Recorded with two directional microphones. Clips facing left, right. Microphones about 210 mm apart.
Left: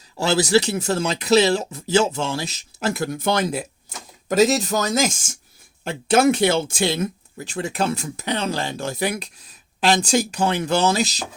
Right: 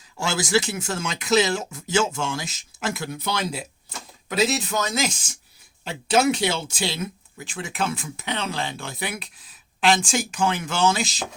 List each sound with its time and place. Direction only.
0.2 s speech: 35° left (ahead or behind)